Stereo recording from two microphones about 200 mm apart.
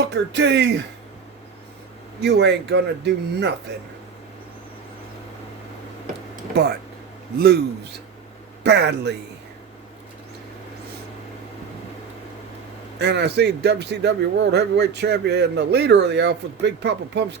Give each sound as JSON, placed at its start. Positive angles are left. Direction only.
{"t": 0.1, "sound": "speech", "side_deg": -60}
{"t": 2.2, "sound": "speech", "side_deg": -60}
{"t": 6.5, "sound": "a man's voice", "side_deg": -55}
{"t": 13.0, "sound": "speech", "side_deg": -55}